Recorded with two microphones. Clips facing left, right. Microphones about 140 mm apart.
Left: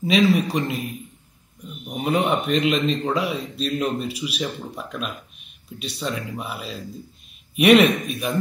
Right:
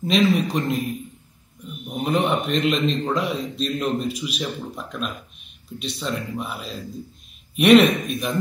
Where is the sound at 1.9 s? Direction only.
10° left (ahead or behind).